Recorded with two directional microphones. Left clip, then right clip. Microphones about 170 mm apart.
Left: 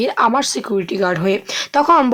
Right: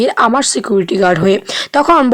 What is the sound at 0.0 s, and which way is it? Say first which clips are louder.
Speech: right 4 dB; 30° right (ahead or behind).